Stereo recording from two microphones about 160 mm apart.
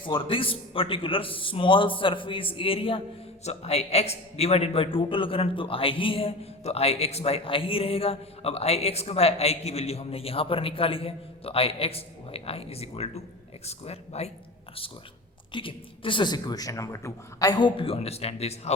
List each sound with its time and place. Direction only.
0.0 s a man's voice: 35° left (ahead or behind)
15.5 s a man's voice: 30° left (ahead or behind)